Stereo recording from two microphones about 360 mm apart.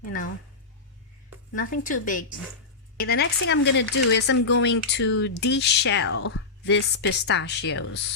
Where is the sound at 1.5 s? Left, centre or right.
Left.